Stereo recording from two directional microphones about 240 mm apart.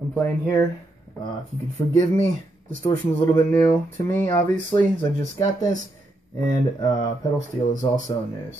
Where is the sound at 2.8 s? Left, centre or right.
Centre.